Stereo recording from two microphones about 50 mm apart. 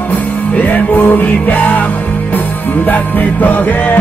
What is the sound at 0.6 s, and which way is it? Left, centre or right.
Music, left.